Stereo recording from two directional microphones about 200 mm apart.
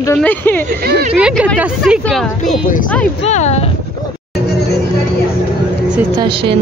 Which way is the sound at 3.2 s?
35° left (ahead or behind).